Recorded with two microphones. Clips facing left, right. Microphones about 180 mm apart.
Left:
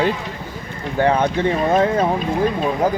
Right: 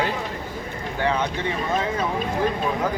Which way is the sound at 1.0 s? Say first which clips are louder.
Left 7 dB; 50° left (ahead or behind).